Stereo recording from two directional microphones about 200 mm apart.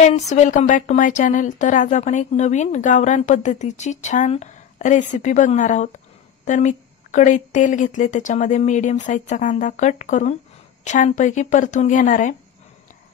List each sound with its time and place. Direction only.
0.1 s speech: 35° left (ahead or behind)